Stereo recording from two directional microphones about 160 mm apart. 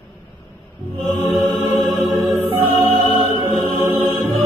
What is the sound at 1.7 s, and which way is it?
Music, 15° right (ahead or behind).